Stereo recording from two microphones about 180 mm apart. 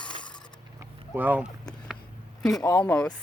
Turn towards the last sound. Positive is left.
turn(degrees=5)  # may be behind; listen again after turning